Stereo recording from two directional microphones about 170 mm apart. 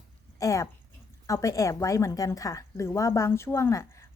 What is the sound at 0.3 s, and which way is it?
A woman's voice, 20° left (ahead or behind).